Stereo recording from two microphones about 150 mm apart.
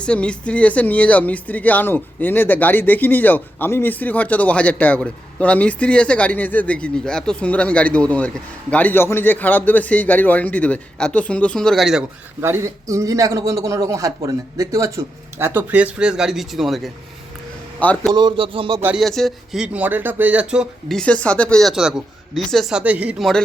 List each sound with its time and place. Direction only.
0.0 s speech: 5° left (ahead or behind)
12.4 s a man's voice: 15° right (ahead or behind); by 16.9 s centre (ahead or behind)
17.7 s speech: 10° left (ahead or behind)
18.1 s speech: 30° right (ahead or behind)
18.9 s speech: centre (ahead or behind)